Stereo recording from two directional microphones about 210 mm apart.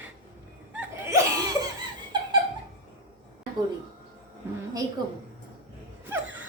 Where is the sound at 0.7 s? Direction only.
10° right (ahead or behind).